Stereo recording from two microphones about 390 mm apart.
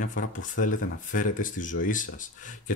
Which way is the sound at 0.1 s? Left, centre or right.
Centre.